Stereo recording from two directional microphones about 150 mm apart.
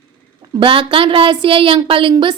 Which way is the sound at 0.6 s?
35° right (ahead or behind).